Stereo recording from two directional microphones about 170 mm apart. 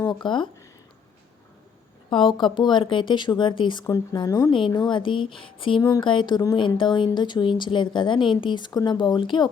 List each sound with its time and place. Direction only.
0.1 s speech: 25° left (ahead or behind)
2.0 s speech: 30° left (ahead or behind)